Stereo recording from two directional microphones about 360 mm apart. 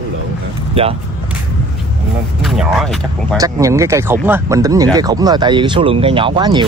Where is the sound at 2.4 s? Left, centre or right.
Centre.